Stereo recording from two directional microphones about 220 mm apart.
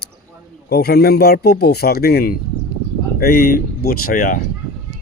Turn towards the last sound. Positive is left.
turn(degrees=40)  # may be behind; listen again after turning